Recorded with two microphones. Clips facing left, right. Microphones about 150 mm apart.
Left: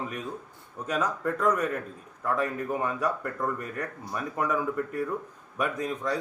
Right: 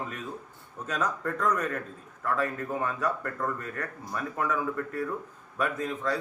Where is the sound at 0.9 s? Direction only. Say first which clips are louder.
Left 2 dB; 10° left (ahead or behind).